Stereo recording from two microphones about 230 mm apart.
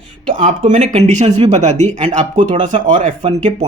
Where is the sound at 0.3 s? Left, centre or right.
Right.